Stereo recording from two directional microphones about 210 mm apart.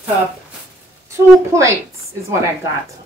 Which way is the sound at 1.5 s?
15° right (ahead or behind).